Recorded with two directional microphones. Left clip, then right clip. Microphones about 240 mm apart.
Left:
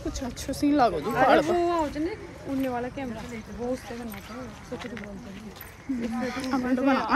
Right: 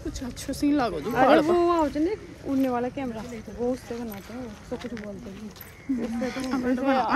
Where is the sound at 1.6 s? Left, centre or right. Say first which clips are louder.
Right 3 dB; right.